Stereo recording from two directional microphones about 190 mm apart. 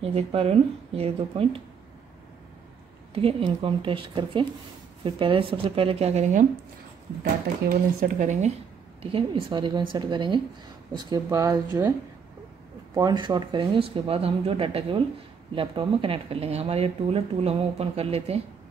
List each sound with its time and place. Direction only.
0.0 s speech: 30° right (ahead or behind)
3.2 s speech: 30° right (ahead or behind)
7.7 s speech: 45° right (ahead or behind)
9.0 s speech: 25° right (ahead or behind)
12.9 s speech: 20° right (ahead or behind)